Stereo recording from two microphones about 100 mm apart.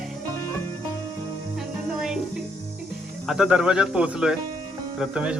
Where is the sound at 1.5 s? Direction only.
5° right (ahead or behind).